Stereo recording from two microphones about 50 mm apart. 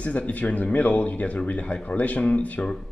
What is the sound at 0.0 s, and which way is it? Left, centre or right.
Speech, left.